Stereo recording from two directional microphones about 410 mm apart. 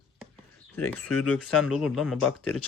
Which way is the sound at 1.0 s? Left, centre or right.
Left.